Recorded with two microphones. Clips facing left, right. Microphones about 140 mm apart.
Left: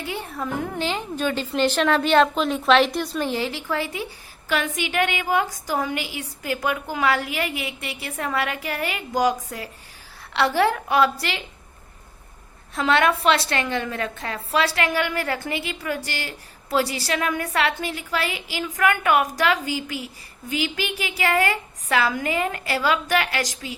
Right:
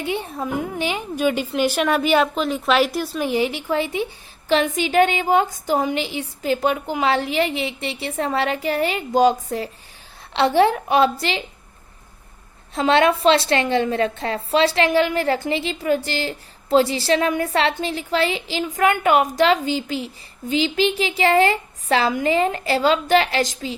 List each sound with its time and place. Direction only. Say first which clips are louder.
0.0 s a woman's voice: right 4 dB; 20° right (ahead or behind)
12.7 s a woman's voice: right 3 dB; 25° right (ahead or behind)